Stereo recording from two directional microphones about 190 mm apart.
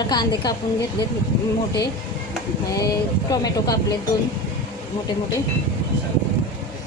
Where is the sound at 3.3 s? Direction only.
20° left (ahead or behind).